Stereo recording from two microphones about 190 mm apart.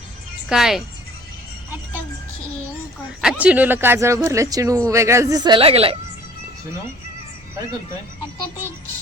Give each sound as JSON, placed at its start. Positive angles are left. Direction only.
{"t": 0.4, "sound": "speech", "side_deg": 0}
{"t": 3.2, "sound": "speech", "side_deg": -5}